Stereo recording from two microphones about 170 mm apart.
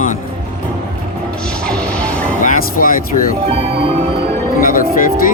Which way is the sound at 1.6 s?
5° left (ahead or behind).